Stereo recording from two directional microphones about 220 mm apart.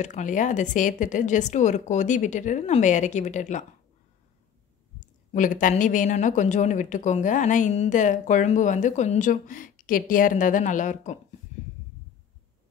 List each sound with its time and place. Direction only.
0.0 s a woman's voice: 35° left (ahead or behind)
5.0 s a woman's voice: 35° left (ahead or behind)